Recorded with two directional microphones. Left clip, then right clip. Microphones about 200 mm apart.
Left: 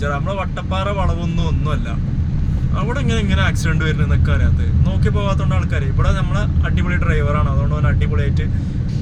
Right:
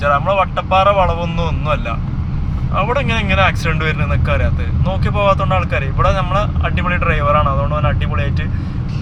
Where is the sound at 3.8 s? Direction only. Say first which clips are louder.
Right 3 dB; 10° left (ahead or behind).